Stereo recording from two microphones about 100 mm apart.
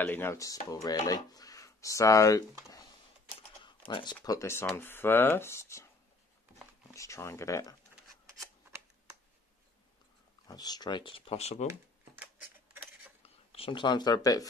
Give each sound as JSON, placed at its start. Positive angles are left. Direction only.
{"t": 0.0, "sound": "speech", "side_deg": 20}
{"t": 0.4, "sound": "speech", "side_deg": 35}
{"t": 3.6, "sound": "speech", "side_deg": 55}
{"t": 6.9, "sound": "speech", "side_deg": 30}
{"t": 10.5, "sound": "speech", "side_deg": 40}
{"t": 12.7, "sound": "cutlery", "side_deg": -20}
{"t": 13.5, "sound": "speech", "side_deg": 65}